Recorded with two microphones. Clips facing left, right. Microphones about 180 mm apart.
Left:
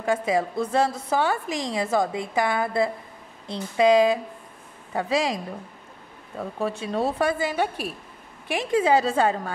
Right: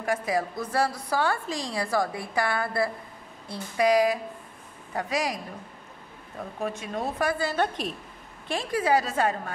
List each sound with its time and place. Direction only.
0.0 s a woman's voice: 25° left (ahead or behind)
6.6 s speech: 30° left (ahead or behind)
7.4 s a woman's voice: 10° left (ahead or behind)
8.5 s a woman's voice: 20° left (ahead or behind)